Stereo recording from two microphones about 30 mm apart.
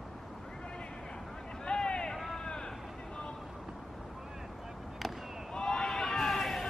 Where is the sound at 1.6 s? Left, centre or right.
Left.